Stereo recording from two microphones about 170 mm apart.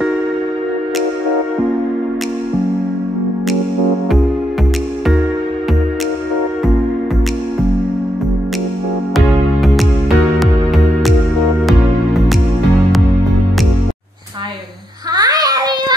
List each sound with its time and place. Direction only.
9.1 s music: centre (ahead or behind)
11.6 s music: centre (ahead or behind)
15.1 s child singing: 20° right (ahead or behind)